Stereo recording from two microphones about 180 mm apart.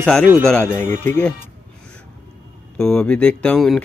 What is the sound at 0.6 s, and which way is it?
Speech, 15° left (ahead or behind).